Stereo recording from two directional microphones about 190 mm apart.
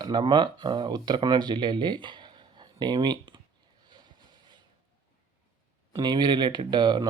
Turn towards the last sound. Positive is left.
turn(degrees=-25)  # may be behind; listen again after turning